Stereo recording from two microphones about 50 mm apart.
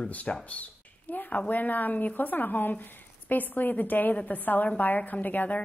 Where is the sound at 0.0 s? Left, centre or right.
Left.